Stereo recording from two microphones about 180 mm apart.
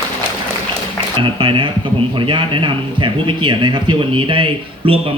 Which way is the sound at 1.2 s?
25° right (ahead or behind).